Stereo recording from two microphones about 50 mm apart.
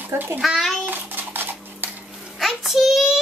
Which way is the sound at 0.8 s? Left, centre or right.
Right.